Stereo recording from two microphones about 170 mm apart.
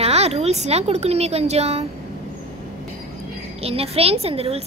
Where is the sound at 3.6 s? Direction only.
35° right (ahead or behind).